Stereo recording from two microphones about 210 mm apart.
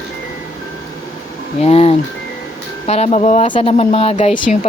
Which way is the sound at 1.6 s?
30° left (ahead or behind).